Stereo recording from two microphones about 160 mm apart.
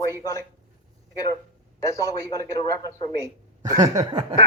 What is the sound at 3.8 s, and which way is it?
Speech, 20° right (ahead or behind).